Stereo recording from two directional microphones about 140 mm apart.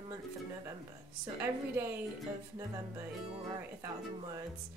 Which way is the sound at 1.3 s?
15° right (ahead or behind).